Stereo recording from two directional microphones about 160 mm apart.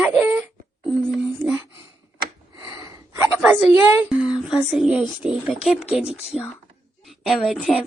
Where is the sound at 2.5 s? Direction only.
20° right (ahead or behind).